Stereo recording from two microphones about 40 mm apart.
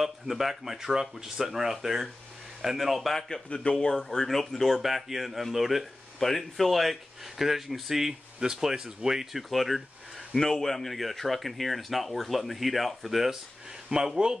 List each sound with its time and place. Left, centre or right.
0.0 s speech: centre
3.4 s speech: left
3.7 s speech: centre
6.1 s speech: centre
10.3 s speech: centre
13.8 s speech: centre